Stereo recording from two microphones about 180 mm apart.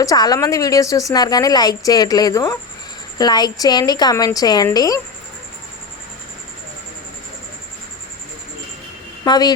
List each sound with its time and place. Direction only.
0.0 s a woman's voice: 20° left (ahead or behind)
9.2 s speech: 25° left (ahead or behind)